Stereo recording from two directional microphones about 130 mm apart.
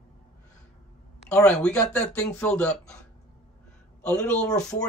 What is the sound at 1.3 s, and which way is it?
Speech, 5° left (ahead or behind).